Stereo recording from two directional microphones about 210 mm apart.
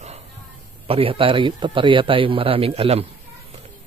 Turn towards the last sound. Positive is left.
turn(degrees=-30)  # may be behind; listen again after turning